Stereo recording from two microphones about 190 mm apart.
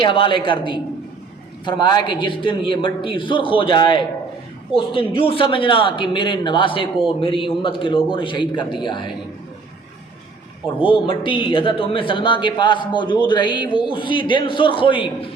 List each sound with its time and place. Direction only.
0.0 s speech: 25° left (ahead or behind)
10.8 s speech: 25° left (ahead or behind)